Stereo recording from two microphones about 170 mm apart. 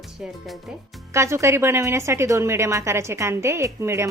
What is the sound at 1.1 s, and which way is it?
A woman's voice, 15° right (ahead or behind).